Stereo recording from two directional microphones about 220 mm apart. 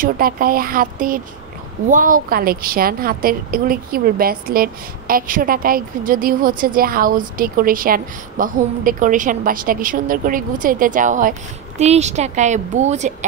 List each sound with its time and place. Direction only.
0.0 s a woman's voice: 40° right (ahead or behind)